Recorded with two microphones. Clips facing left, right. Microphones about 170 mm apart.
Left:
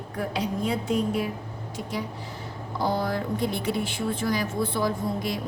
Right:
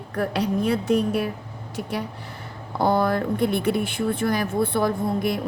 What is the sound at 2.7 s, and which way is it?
A woman's voice, 60° right (ahead or behind).